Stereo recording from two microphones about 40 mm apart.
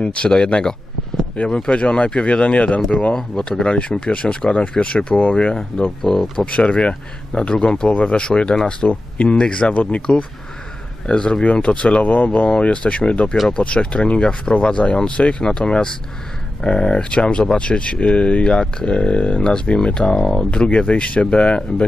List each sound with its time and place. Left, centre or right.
0.0 s speech: left
13.5 s speech: left
20.6 s speech: left